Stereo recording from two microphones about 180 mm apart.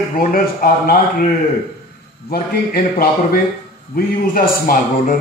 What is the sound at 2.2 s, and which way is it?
A man's voice, 55° left (ahead or behind).